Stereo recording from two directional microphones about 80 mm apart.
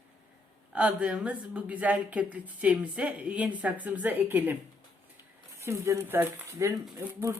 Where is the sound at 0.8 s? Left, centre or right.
Centre.